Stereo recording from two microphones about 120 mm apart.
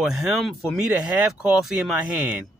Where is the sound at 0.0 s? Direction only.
Centre (ahead or behind).